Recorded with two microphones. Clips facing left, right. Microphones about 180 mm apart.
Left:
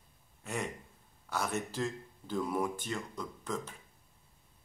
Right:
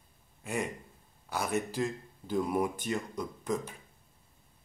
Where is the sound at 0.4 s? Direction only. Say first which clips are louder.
Right 4 dB; 10° right (ahead or behind).